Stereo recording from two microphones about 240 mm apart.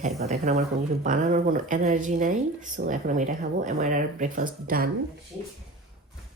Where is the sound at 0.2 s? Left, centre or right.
Right.